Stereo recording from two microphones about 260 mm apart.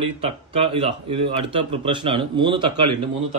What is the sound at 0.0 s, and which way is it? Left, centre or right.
Speech, right.